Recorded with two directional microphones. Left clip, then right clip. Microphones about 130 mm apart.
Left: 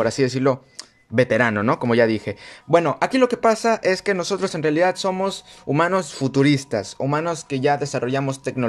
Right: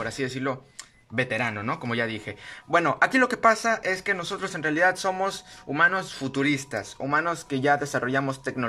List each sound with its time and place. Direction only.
0.0 s speech: 50° left (ahead or behind)
1.5 s speech: 75° left (ahead or behind); by 2.3 s 45° left (ahead or behind)
2.7 s speech: 25° left (ahead or behind)
5.8 s speech: 55° left (ahead or behind); by 6.9 s 35° left (ahead or behind)
7.0 s speech: 25° left (ahead or behind)